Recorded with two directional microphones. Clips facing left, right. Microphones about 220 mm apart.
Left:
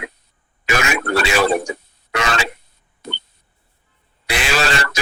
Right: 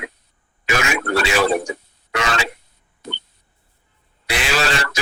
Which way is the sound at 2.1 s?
60° left (ahead or behind).